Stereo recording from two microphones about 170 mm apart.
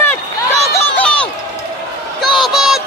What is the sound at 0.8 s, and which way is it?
Run, 10° left (ahead or behind).